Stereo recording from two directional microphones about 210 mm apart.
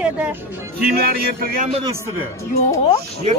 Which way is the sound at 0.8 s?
45° right (ahead or behind).